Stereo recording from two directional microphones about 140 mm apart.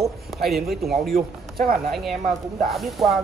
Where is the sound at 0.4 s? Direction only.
Centre (ahead or behind).